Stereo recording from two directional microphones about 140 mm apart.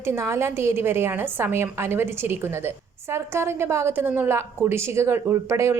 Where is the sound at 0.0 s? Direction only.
20° right (ahead or behind).